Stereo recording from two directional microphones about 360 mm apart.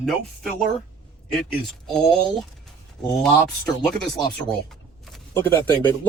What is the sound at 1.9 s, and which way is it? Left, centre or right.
Speech, centre.